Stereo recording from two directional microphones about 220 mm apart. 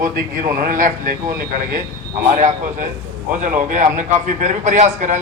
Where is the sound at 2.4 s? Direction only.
35° right (ahead or behind).